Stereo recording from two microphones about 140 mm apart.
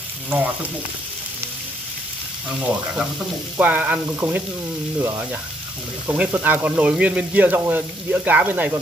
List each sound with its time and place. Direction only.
0.3 s speech: 10° right (ahead or behind)
3.5 s speech: 10° right (ahead or behind)